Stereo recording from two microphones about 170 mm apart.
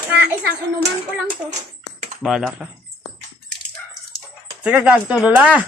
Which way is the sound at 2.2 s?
Centre (ahead or behind).